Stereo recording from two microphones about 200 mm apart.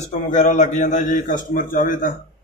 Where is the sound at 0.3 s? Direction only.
35° left (ahead or behind).